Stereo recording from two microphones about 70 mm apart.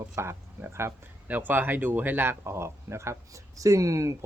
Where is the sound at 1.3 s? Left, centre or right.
Right.